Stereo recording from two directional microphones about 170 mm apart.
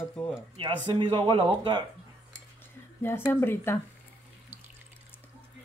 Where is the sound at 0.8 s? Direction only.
30° right (ahead or behind).